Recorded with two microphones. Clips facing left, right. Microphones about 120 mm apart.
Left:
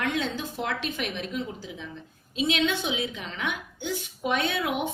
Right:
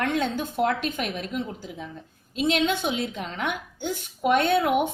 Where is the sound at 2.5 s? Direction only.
45° right (ahead or behind).